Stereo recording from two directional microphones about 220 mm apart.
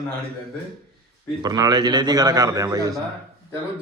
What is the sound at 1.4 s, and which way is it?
A man's voice, 20° right (ahead or behind).